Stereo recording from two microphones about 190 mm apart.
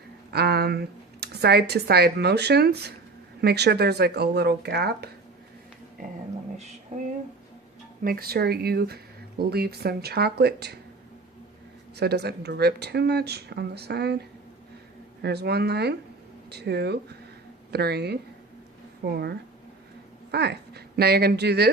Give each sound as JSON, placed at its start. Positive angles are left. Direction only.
{"t": 0.3, "sound": "speech", "side_deg": -60}
{"t": 8.0, "sound": "speech", "side_deg": -50}
{"t": 11.9, "sound": "speech", "side_deg": -60}